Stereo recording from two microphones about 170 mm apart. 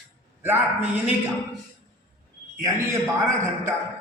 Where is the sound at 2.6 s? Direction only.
15° right (ahead or behind).